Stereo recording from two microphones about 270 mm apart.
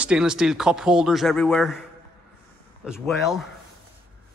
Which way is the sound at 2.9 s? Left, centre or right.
Centre.